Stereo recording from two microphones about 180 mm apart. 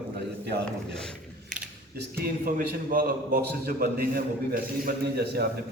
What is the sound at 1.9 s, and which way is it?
A man's voice, 55° right (ahead or behind).